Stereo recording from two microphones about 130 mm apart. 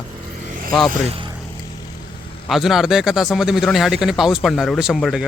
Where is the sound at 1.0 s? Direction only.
45° right (ahead or behind).